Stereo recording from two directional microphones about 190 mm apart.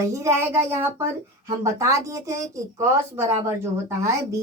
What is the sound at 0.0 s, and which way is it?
A child's voice, 15° right (ahead or behind).